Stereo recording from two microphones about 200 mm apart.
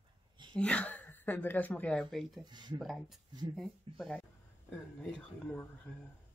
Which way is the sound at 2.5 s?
20° right (ahead or behind).